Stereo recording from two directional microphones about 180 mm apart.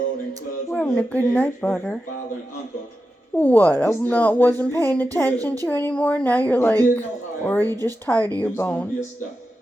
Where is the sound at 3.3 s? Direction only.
10° left (ahead or behind).